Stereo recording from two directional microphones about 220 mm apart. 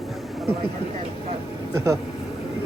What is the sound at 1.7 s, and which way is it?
Speech, 15° right (ahead or behind).